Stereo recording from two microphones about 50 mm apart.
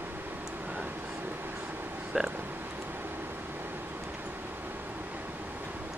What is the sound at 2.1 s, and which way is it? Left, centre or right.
Speech, centre.